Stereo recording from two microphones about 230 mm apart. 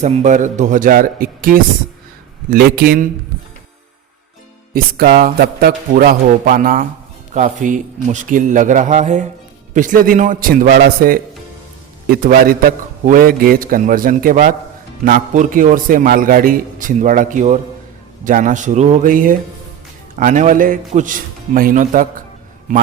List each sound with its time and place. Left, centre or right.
0.0 s a man's voice: right
4.7 s a man's voice: right